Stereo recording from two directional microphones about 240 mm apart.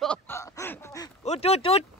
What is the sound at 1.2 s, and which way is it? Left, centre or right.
Speech, left.